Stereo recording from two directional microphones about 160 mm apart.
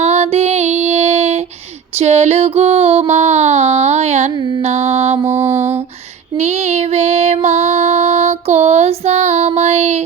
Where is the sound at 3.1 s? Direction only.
45° right (ahead or behind).